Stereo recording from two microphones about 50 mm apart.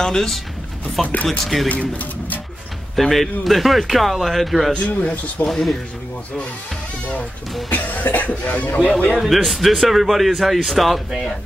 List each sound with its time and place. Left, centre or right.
0.0 s speech: centre
1.0 s speech: left
1.4 s a man's voice: centre
1.7 s speech: left
3.0 s a man's voice: centre
4.7 s speech: left
5.5 s a man's voice: centre
7.7 s speech: left
9.2 s a man's voice: centre